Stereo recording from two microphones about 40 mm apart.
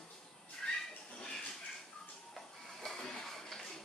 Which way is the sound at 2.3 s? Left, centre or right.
Centre.